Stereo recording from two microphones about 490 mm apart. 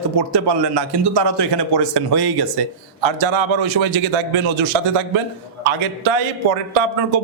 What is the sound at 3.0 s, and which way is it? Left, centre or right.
Speech, right.